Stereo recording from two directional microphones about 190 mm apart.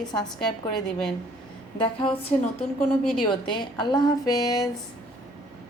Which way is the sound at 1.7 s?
30° left (ahead or behind).